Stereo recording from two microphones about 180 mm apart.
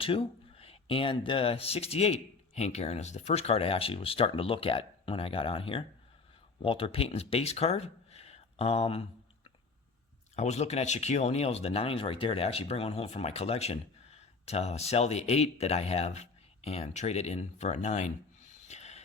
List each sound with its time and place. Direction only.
0.0 s speech: 30° left (ahead or behind)
10.3 s speech: 40° left (ahead or behind)
18.7 s a sound: 35° left (ahead or behind)